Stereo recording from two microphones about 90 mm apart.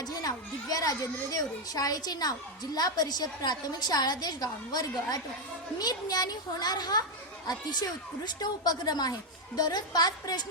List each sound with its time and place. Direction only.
0.2 s a child's voice: 45° left (ahead or behind)